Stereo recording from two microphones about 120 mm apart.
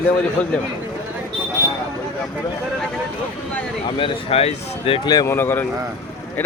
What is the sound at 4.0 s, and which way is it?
Speech, 55° left (ahead or behind).